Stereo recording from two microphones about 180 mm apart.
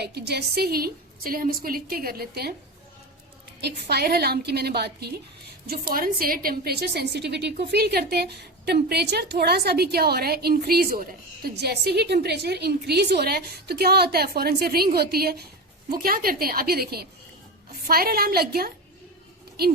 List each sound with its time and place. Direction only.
0.0 s a woman's voice: 65° right (ahead or behind)
3.6 s a woman's voice: 65° right (ahead or behind)